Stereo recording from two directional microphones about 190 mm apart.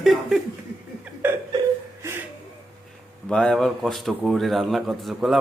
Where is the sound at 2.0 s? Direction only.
10° right (ahead or behind).